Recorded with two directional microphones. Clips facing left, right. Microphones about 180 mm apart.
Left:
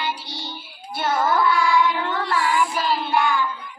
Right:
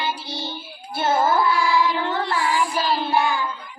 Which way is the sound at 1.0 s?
25° right (ahead or behind).